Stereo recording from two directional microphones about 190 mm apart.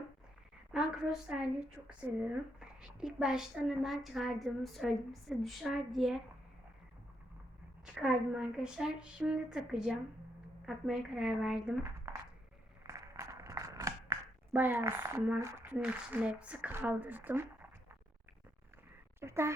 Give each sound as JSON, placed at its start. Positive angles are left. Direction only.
{"t": 0.7, "sound": "a woman's voice", "side_deg": -5}
{"t": 7.9, "sound": "a woman's voice", "side_deg": -5}
{"t": 12.1, "sound": "a sound", "side_deg": -15}
{"t": 19.2, "sound": "speech", "side_deg": -15}